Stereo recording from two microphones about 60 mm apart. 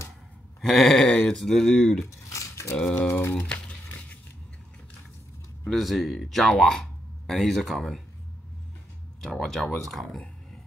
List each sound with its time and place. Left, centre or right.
0.6 s speech: centre
2.0 s a sound: left
2.8 s speech: centre
3.1 s speech: left
3.3 s crumpling: left
5.7 s speech: centre
9.2 s speech: centre